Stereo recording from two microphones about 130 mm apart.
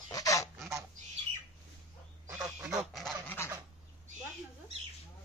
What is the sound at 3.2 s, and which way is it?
Dog, 20° left (ahead or behind).